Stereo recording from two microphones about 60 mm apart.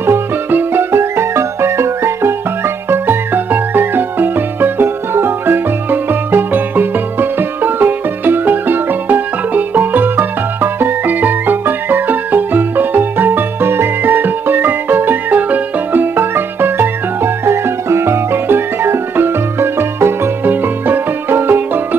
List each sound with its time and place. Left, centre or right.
0.0 s music: right
0.9 s music: right
2.9 s music: right